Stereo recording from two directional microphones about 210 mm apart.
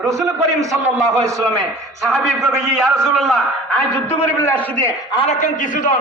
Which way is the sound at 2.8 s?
Centre (ahead or behind).